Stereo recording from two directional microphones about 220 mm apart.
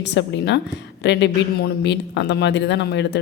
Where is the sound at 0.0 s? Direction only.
50° left (ahead or behind).